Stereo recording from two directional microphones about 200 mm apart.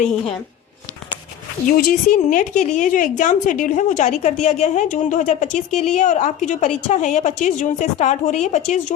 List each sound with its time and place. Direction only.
1.6 s a woman's voice: 45° left (ahead or behind)